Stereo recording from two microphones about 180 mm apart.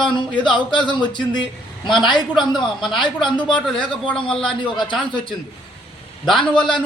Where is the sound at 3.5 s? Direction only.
5° left (ahead or behind).